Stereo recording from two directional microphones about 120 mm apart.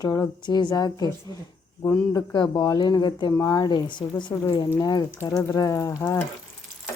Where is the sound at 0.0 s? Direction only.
30° left (ahead or behind).